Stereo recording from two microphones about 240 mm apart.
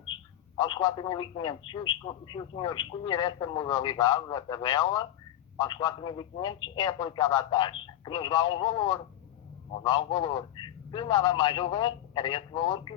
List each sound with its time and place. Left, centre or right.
0.5 s a man's voice: centre